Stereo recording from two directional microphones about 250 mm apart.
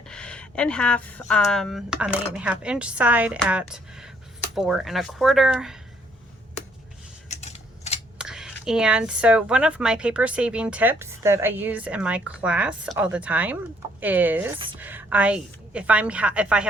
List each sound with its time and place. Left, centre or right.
0.1 s speech: centre
7.3 s typewriter: left
8.2 s speech: centre